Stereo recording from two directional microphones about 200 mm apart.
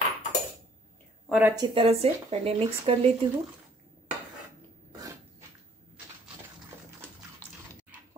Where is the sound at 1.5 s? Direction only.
25° right (ahead or behind).